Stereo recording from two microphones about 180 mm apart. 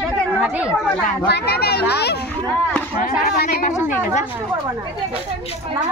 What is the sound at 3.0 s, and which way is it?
Speech, 50° left (ahead or behind).